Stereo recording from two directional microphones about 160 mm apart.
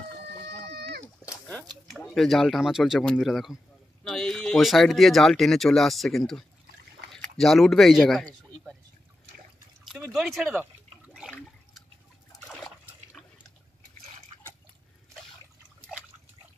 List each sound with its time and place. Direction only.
0.7 s a sound: 90° right
1.5 s speech: centre (ahead or behind)
7.1 s a sound: centre (ahead or behind)
9.8 s speech: centre (ahead or behind)
11.1 s toilet flush: centre (ahead or behind)
12.4 s liquid: centre (ahead or behind)